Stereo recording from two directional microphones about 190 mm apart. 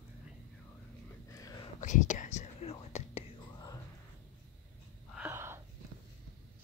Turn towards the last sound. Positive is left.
turn(degrees=-10)  # may be behind; listen again after turning